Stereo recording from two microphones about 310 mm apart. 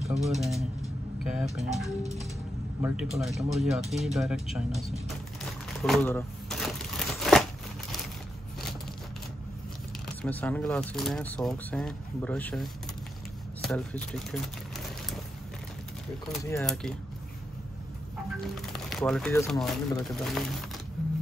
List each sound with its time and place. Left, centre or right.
0.2 s speech: centre
4.9 s a sound: centre
7.2 s crumpling: centre
10.0 s speech: centre
13.6 s a sound: centre
16.3 s speech: centre
18.9 s speech: centre